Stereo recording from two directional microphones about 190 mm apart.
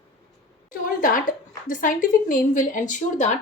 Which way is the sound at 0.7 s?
45° left (ahead or behind).